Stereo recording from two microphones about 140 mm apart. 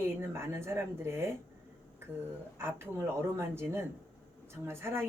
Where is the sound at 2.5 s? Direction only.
20° right (ahead or behind).